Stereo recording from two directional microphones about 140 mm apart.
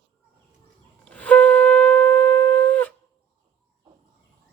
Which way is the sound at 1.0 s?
10° left (ahead or behind).